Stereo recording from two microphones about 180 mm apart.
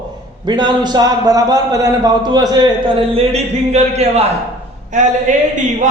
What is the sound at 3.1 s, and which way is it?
Speech, 35° right (ahead or behind).